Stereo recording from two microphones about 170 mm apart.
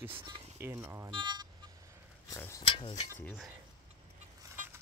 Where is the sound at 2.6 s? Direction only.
35° left (ahead or behind).